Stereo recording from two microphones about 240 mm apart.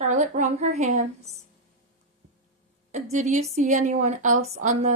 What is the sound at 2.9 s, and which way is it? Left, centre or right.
A woman's voice, right.